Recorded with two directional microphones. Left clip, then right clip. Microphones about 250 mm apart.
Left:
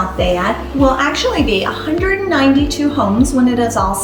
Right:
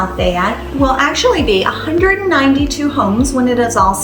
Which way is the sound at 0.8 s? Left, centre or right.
Centre.